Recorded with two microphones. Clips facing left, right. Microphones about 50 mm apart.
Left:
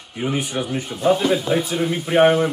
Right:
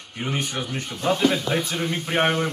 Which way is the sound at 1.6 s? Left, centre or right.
Centre.